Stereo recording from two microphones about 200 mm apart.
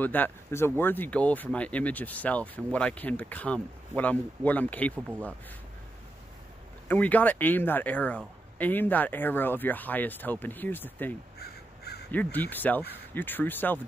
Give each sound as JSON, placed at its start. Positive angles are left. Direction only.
{"t": 0.0, "sound": "speech", "side_deg": 10}
{"t": 6.9, "sound": "speech", "side_deg": 10}
{"t": 11.3, "sound": "crow", "side_deg": 55}
{"t": 12.1, "sound": "speech", "side_deg": 10}